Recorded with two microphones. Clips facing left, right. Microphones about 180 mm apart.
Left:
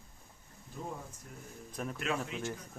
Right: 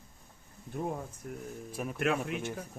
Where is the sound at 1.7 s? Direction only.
5° right (ahead or behind).